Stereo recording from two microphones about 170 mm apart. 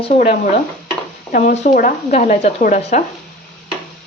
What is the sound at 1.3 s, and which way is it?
Speech, 50° left (ahead or behind).